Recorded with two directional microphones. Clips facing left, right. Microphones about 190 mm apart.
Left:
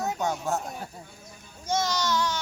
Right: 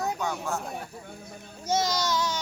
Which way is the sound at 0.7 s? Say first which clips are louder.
Right 1 dB; 60° right (ahead or behind).